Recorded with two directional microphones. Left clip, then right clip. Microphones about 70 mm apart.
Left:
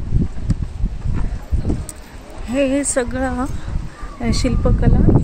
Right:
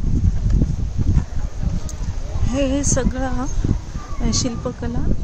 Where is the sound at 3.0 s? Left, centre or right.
Left.